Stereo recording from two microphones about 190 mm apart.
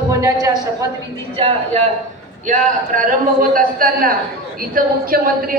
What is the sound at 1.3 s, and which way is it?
Speech, 30° right (ahead or behind).